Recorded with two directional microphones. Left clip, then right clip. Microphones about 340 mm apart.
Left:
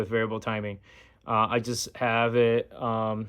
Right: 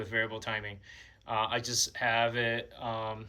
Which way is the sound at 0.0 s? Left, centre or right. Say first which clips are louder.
Left 5 dB; centre.